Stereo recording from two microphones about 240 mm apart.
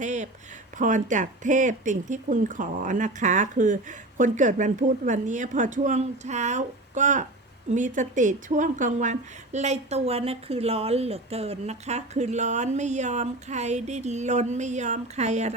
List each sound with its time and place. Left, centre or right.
0.0 s a woman's voice: right